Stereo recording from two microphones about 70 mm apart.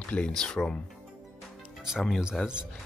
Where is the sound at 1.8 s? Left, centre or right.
Centre.